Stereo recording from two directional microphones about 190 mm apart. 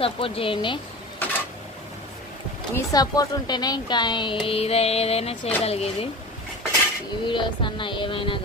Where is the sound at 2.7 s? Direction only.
20° left (ahead or behind).